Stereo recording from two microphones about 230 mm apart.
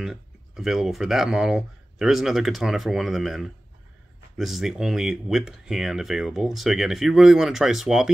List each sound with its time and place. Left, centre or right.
0.0 s speech: centre